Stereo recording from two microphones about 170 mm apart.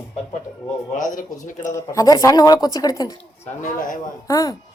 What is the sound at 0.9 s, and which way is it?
Speech, 50° left (ahead or behind).